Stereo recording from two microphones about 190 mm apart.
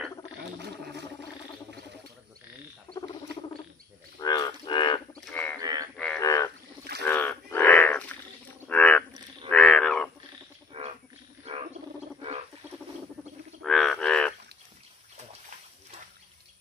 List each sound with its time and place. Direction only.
4.2 s cattle: 20° left (ahead or behind)
5.2 s bird: 5° left (ahead or behind)
5.6 s a sound: 20° right (ahead or behind)
6.1 s frog: 15° left (ahead or behind)
8.6 s a sound: 5° left (ahead or behind)
10.7 s frog: 30° right (ahead or behind)
11.5 s wild animals: 35° right (ahead or behind)
13.6 s frog: centre (ahead or behind)